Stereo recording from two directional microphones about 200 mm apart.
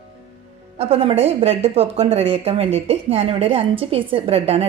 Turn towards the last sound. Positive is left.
turn(degrees=-30)  # may be behind; listen again after turning